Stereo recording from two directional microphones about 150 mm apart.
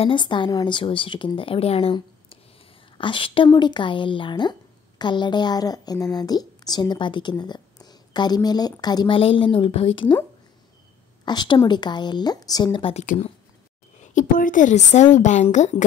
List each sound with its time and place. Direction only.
0.0 s a woman's voice: 30° left (ahead or behind)
11.2 s a woman's voice: 30° left (ahead or behind)
14.1 s speech: 60° left (ahead or behind)